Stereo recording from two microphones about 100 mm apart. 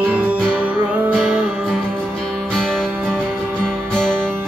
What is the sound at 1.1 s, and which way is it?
Music, 5° left (ahead or behind).